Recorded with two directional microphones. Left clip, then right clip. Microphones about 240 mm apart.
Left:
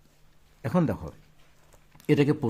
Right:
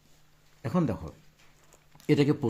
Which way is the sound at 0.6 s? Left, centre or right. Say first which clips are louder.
Left 3 dB; centre.